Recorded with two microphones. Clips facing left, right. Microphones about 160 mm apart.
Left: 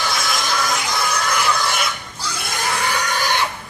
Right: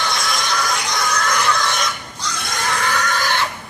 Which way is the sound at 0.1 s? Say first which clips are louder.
Even; centre (ahead or behind).